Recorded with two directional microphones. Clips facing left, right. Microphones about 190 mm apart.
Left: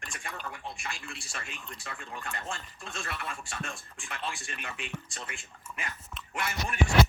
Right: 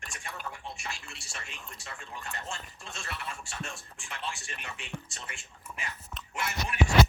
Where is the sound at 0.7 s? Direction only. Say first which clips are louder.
Left 2 dB; 55° left (ahead or behind).